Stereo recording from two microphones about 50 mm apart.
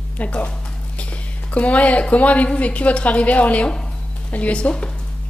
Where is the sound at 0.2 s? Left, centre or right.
Left.